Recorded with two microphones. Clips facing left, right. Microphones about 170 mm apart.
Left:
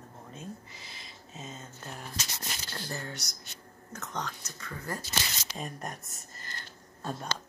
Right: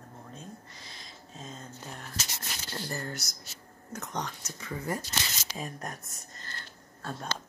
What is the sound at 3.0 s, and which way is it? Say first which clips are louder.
Speech: right 3 dB; 5° right (ahead or behind).